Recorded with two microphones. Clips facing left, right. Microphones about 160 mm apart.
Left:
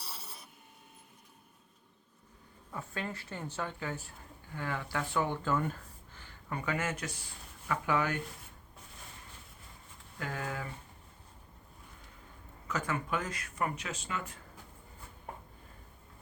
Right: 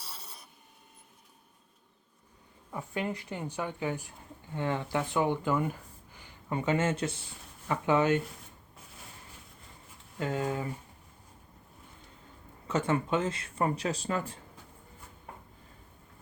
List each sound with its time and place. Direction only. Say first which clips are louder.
0.0 s rub: even; centre (ahead or behind)
2.7 s a woman's voice: right 5 dB; 15° right (ahead or behind)
10.2 s speech: right 7 dB; 20° right (ahead or behind)
12.6 s speech: right 6 dB; 30° right (ahead or behind)